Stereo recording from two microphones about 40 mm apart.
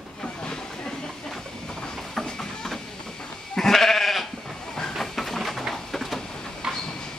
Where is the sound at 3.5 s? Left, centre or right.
Centre.